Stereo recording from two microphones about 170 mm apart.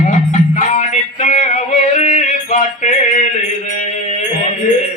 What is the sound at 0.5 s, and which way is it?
Yodeling, 45° left (ahead or behind).